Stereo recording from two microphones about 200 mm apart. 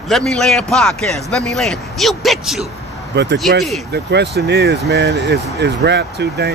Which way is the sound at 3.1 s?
60° right (ahead or behind).